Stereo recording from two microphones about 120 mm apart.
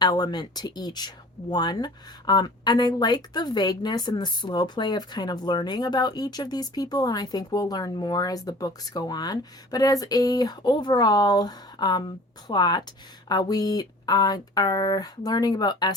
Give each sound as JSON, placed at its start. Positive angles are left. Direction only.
{"t": 0.0, "sound": "speech", "side_deg": 35}